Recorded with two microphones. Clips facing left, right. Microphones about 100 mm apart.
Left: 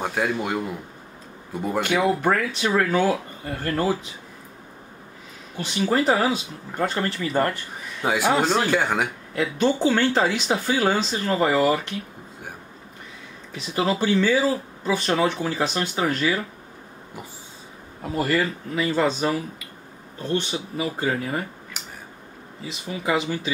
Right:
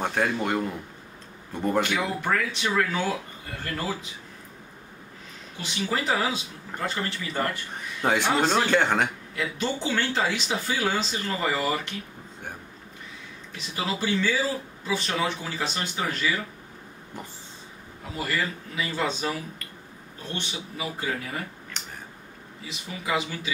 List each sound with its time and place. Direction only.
0.0 s speech: 5° left (ahead or behind)
1.9 s speech: 45° left (ahead or behind)
5.6 s speech: 45° left (ahead or behind)
8.0 s speech: 10° left (ahead or behind)
9.3 s speech: 45° left (ahead or behind)
13.7 s speech: 45° left (ahead or behind)
18.1 s a man's voice: 45° left (ahead or behind)
20.3 s a man's voice: 40° left (ahead or behind)
21.8 s a sound: 5° left (ahead or behind)
22.7 s a man's voice: 40° left (ahead or behind)